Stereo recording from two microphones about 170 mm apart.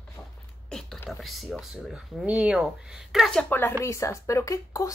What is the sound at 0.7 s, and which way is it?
A woman's voice, 5° left (ahead or behind).